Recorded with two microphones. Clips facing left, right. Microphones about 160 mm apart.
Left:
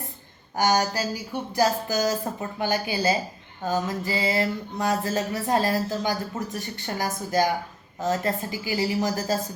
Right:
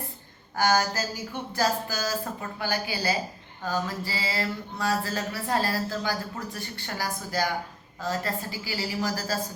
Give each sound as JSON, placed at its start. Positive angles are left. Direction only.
{"t": 0.5, "sound": "speech", "side_deg": 15}
{"t": 1.5, "sound": "mantra", "side_deg": 20}